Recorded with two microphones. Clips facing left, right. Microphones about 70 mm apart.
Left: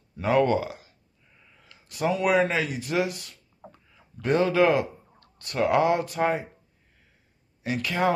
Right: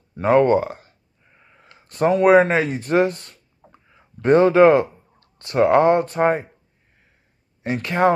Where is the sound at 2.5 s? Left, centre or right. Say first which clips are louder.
Right 8 dB; right.